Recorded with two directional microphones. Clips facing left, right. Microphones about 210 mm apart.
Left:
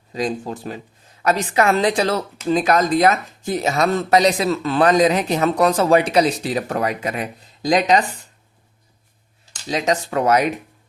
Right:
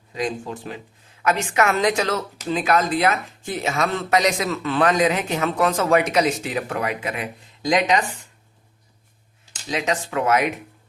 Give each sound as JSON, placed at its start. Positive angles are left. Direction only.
{"t": 0.1, "sound": "speech", "side_deg": 35}
{"t": 9.6, "sound": "speech", "side_deg": 35}